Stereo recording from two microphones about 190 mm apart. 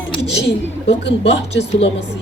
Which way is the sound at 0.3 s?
65° left (ahead or behind).